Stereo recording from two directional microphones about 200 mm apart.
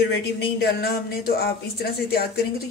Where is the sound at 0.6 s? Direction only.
50° left (ahead or behind).